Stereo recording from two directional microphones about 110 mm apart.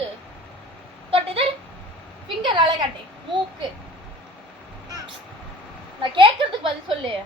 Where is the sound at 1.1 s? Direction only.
60° right (ahead or behind).